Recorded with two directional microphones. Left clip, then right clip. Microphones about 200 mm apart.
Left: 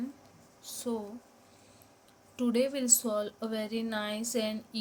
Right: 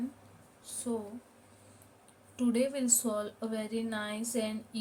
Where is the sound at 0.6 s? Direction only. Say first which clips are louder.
Left 2 dB; 30° left (ahead or behind).